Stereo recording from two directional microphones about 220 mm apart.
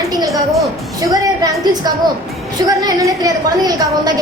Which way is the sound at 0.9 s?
15° right (ahead or behind).